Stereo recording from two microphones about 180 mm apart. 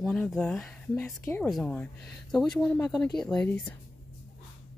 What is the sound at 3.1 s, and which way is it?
Speech, 5° left (ahead or behind).